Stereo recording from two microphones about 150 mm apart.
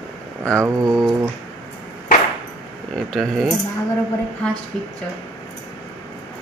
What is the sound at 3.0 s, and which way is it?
Speech, centre (ahead or behind).